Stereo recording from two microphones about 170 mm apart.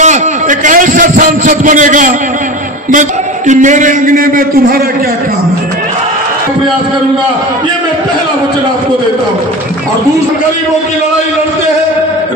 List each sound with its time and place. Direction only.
0.0 s a man's voice: 45° right (ahead or behind)